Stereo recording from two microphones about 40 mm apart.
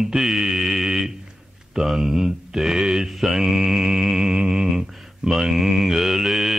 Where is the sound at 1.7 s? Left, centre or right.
Centre.